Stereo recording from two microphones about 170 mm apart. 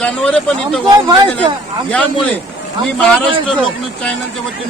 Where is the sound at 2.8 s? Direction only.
5° left (ahead or behind).